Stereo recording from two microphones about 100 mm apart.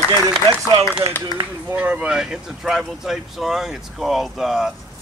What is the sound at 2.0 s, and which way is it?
Speech, 5° right (ahead or behind).